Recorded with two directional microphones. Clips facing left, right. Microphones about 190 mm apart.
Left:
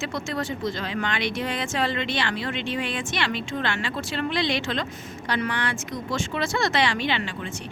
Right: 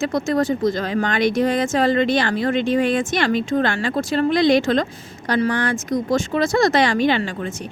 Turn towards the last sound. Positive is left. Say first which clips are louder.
# right 7 dB
turn(degrees=-45)  # may be behind; listen again after turning